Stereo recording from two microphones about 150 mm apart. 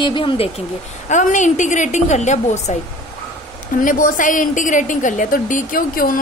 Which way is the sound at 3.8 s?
65° left (ahead or behind).